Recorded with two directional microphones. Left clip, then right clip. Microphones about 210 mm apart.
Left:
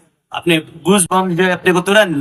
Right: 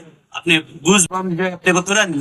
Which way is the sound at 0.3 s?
50° left (ahead or behind).